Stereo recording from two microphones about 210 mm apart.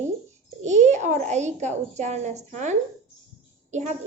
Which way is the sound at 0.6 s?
35° right (ahead or behind).